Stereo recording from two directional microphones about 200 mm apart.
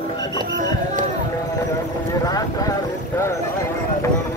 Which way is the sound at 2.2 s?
20° left (ahead or behind).